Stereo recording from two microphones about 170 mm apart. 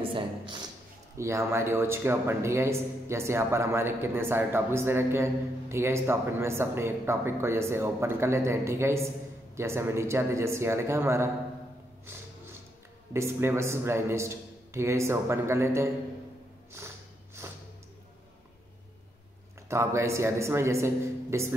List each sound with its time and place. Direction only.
0.0 s speech: 30° right (ahead or behind)
1.1 s a man's voice: 15° right (ahead or behind)
13.1 s a man's voice: 15° right (ahead or behind)
17.4 s a sound: 15° right (ahead or behind)
19.7 s a man's voice: 15° right (ahead or behind)